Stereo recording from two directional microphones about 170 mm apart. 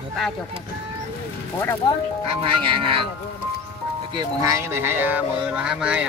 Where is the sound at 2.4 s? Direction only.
30° right (ahead or behind).